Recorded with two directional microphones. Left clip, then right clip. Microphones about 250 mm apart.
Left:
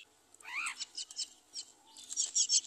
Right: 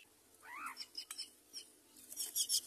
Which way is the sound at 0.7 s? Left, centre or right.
Right.